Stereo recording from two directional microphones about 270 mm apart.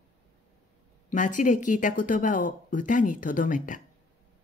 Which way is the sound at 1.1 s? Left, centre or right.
Left.